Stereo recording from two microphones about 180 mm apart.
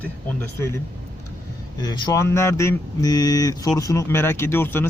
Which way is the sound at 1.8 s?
20° left (ahead or behind).